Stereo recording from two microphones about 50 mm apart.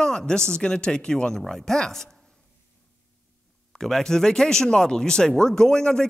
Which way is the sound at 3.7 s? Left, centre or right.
Centre.